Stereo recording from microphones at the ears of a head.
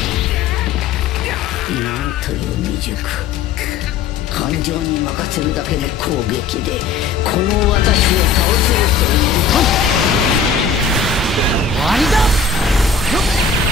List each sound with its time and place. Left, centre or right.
4.4 s speech: left
7.2 s speech: left
11.8 s a sound: centre